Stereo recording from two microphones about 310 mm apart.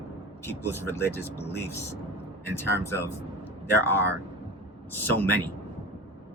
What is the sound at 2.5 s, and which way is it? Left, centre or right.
Speech, centre.